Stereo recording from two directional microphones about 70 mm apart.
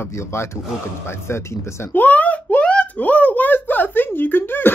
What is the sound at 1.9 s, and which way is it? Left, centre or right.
Speech, left.